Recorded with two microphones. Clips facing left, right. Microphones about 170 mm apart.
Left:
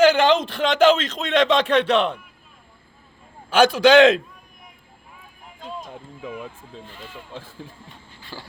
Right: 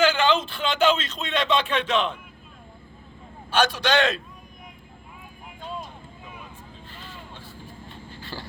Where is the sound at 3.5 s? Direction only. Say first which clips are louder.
Left 8 dB; 90° left.